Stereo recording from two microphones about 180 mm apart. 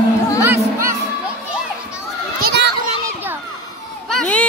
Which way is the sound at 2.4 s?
70° right (ahead or behind).